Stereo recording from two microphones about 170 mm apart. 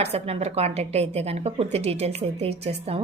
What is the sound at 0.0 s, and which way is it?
A woman's voice, 40° right (ahead or behind).